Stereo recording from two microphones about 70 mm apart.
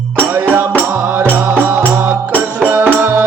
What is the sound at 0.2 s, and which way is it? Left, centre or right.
Music, right.